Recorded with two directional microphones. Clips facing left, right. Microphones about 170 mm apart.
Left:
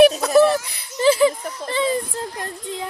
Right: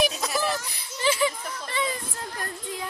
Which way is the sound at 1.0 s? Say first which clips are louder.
Left 9 dB; 35° left (ahead or behind).